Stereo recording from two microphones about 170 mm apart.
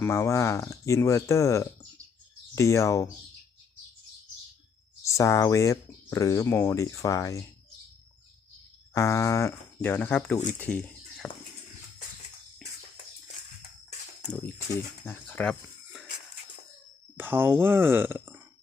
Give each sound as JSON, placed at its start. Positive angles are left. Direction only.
{"t": 0.0, "sound": "speech", "side_deg": 15}
{"t": 5.0, "sound": "speech", "side_deg": 20}
{"t": 8.9, "sound": "speech", "side_deg": 20}
{"t": 12.6, "sound": "music", "side_deg": 0}
{"t": 15.0, "sound": "speech", "side_deg": 10}
{"t": 17.2, "sound": "speech", "side_deg": -10}